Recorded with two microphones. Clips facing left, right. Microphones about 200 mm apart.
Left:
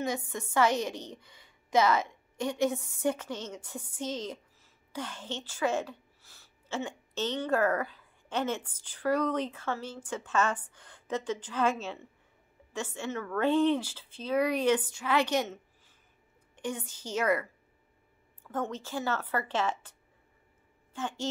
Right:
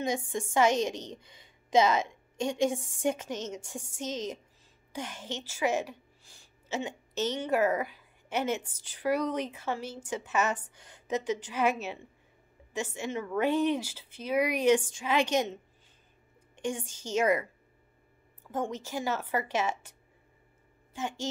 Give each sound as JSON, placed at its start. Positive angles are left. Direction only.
{"t": 0.6, "sound": "a woman's voice", "side_deg": -15}
{"t": 14.8, "sound": "speech", "side_deg": -25}
{"t": 16.6, "sound": "speech", "side_deg": -15}
{"t": 18.5, "sound": "speech", "side_deg": -10}
{"t": 20.9, "sound": "speech", "side_deg": -10}